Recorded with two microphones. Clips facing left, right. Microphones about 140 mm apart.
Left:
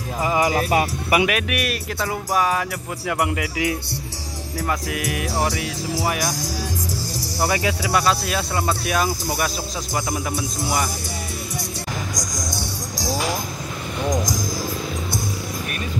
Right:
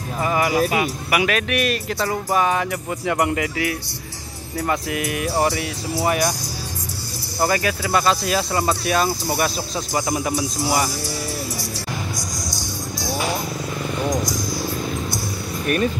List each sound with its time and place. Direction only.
0.2 s speech: 20° left (ahead or behind)
0.7 s speech: 35° left (ahead or behind)
1.2 s speech: 10° left (ahead or behind)
7.4 s speech: 10° left (ahead or behind)
12.2 s music: 50° left (ahead or behind)
12.9 s vehicle: 90° left